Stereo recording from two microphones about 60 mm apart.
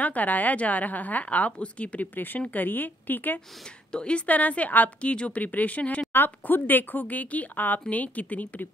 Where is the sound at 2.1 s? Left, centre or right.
Left.